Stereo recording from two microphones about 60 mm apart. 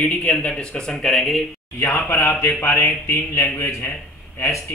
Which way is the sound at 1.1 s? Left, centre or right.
Centre.